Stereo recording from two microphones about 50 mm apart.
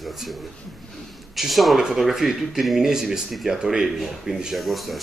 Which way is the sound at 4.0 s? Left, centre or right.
Centre.